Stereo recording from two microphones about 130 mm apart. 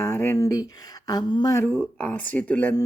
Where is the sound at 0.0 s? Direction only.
20° left (ahead or behind).